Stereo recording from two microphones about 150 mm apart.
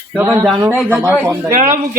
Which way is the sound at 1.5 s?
65° right (ahead or behind).